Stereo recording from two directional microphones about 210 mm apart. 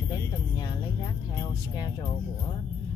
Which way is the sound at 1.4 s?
20° left (ahead or behind).